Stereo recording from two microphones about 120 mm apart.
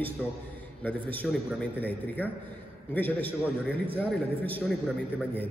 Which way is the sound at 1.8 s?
15° left (ahead or behind).